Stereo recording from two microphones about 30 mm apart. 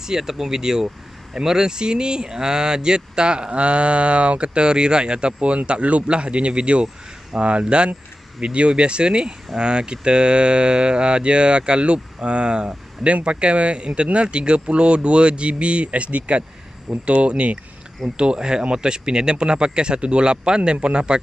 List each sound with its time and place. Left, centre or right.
0.0 s speech: centre; by 17.6 s right
18.1 s speech: right